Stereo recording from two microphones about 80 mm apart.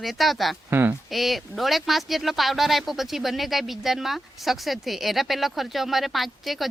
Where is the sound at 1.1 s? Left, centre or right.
Centre.